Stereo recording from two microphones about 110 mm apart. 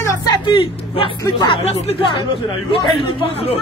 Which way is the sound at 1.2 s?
40° left (ahead or behind).